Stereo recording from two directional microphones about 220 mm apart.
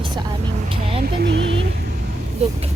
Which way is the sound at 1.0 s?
50° right (ahead or behind).